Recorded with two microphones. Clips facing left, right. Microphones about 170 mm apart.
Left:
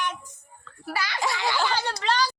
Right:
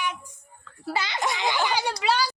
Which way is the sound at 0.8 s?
20° right (ahead or behind).